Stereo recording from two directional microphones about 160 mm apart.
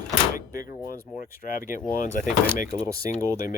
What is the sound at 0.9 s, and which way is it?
Speech, 65° left (ahead or behind).